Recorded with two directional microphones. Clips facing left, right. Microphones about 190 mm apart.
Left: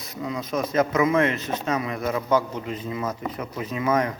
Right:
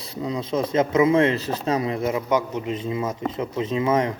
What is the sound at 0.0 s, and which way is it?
Speech, 30° right (ahead or behind).